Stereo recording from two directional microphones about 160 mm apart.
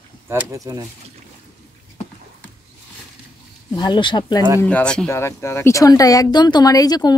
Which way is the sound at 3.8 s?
30° left (ahead or behind).